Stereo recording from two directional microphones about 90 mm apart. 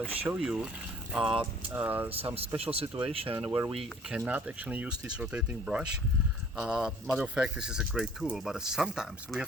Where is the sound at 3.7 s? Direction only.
Centre (ahead or behind).